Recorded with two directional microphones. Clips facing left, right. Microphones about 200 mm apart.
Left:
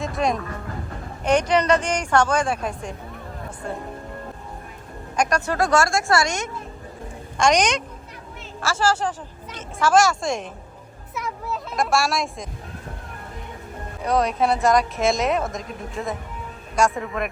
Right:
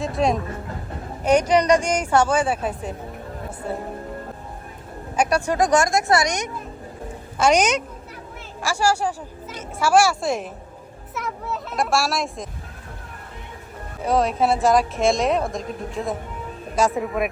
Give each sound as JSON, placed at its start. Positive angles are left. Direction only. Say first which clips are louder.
{"t": 0.0, "sound": "speech", "louder": "right 2 dB", "side_deg": 0}
{"t": 5.1, "sound": "speech", "louder": "right 2 dB", "side_deg": -10}
{"t": 7.3, "sound": "speech", "louder": "right 1 dB", "side_deg": -5}
{"t": 14.0, "sound": "speech", "louder": "right 1 dB", "side_deg": 0}